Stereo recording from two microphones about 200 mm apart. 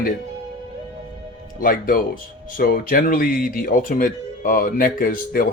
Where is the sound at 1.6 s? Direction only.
45° left (ahead or behind).